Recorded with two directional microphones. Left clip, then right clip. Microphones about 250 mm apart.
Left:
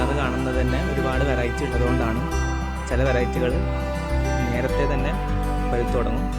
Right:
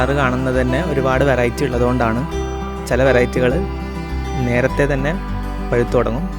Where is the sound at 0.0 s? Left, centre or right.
Right.